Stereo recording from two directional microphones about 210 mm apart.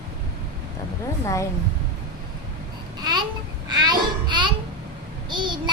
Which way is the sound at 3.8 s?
20° right (ahead or behind).